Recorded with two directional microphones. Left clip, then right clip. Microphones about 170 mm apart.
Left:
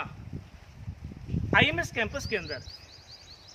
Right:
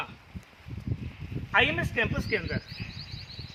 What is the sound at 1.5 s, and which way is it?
Speech, 20° left (ahead or behind).